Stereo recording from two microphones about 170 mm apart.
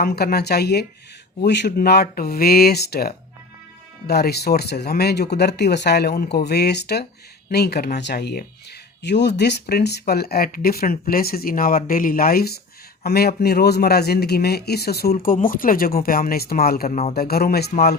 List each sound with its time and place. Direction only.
0.0 s speech: 65° left (ahead or behind)
9.0 s speech: 90° left; by 17.9 s 65° left (ahead or behind)